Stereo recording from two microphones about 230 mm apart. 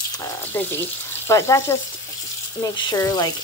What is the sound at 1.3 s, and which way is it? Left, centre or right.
Speech, centre.